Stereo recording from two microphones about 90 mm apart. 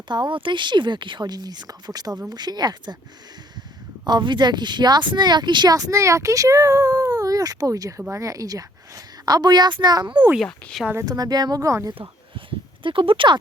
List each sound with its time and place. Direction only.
0.1 s a woman's voice: 60° right (ahead or behind)
4.0 s speech: 55° right (ahead or behind)
5.7 s a woman's voice: 40° right (ahead or behind); by 10.2 s 55° right (ahead or behind)
10.4 s speech: 5° left (ahead or behind)
11.0 s a woman's voice: 45° right (ahead or behind)
12.5 s speech: 75° right (ahead or behind)